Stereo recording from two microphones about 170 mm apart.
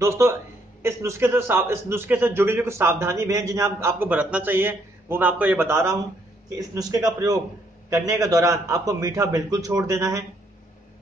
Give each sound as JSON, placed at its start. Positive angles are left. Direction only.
{"t": 0.0, "sound": "a man's voice", "side_deg": -15}